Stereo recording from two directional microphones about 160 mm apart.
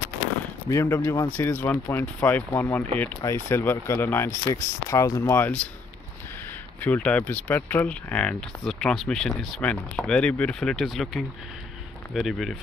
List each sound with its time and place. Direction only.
0.7 s speech: 20° left (ahead or behind)
6.8 s speech: 10° left (ahead or behind)